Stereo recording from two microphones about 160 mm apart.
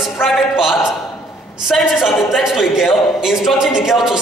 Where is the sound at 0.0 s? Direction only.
Centre (ahead or behind).